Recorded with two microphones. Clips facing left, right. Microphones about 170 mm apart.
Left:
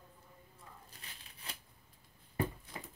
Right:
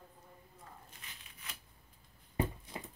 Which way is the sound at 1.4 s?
30° left (ahead or behind).